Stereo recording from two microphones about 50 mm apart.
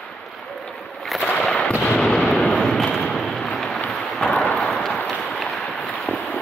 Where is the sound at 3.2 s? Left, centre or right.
Centre.